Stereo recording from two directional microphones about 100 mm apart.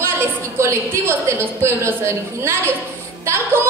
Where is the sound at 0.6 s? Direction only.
25° right (ahead or behind).